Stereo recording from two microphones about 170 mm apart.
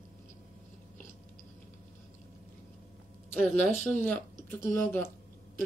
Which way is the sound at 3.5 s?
5° left (ahead or behind).